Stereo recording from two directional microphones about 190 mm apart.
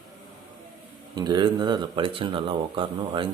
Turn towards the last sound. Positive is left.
turn(degrees=-25)  # may be behind; listen again after turning